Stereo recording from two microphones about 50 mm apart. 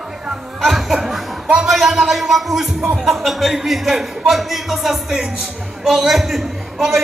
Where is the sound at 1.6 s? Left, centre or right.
Centre.